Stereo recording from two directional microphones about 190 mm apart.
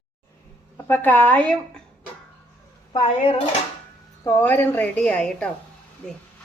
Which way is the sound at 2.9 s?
30° left (ahead or behind).